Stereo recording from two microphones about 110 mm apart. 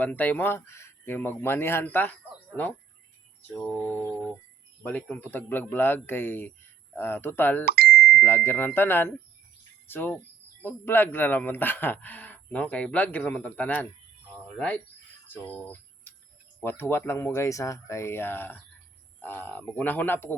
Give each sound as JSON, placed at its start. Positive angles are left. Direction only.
{"t": 0.0, "sound": "speech", "side_deg": 15}
{"t": 3.8, "sound": "speech", "side_deg": 15}
{"t": 7.9, "sound": "ding", "side_deg": 0}
{"t": 8.2, "sound": "speech", "side_deg": 15}
{"t": 15.6, "sound": "cricket", "side_deg": 15}
{"t": 16.6, "sound": "speech", "side_deg": 20}